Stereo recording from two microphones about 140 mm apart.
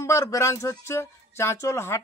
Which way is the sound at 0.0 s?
20° left (ahead or behind).